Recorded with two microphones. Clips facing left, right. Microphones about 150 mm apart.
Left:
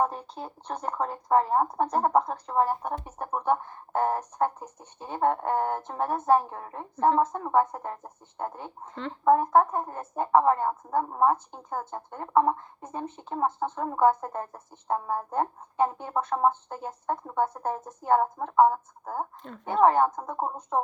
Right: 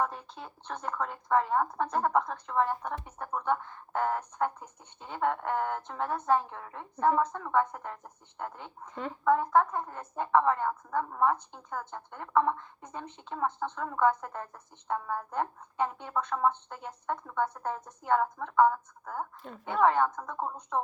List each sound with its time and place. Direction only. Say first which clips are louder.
0.0 s speech: left 5 dB; 30° left (ahead or behind)
19.4 s a woman's voice: left 2 dB; 5° right (ahead or behind)
19.6 s speech: left 4 dB; 35° left (ahead or behind)